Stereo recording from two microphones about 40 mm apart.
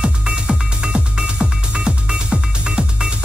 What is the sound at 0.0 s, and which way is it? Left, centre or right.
Music, right.